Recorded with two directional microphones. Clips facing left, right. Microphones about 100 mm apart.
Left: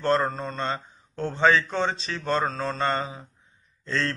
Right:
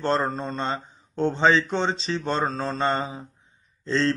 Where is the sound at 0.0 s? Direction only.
25° right (ahead or behind).